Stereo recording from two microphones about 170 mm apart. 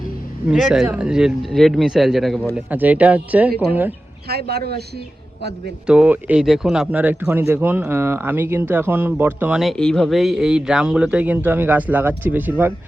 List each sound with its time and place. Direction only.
0.5 s speech: centre (ahead or behind)
4.3 s a man's voice: 70° right (ahead or behind)
5.4 s a man's voice: 80° right
5.8 s speech: 5° right (ahead or behind)